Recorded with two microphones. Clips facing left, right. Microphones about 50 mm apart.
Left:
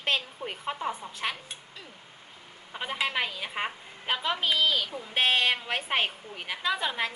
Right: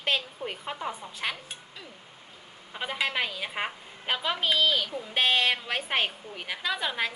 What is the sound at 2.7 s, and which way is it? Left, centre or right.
A woman's voice, centre.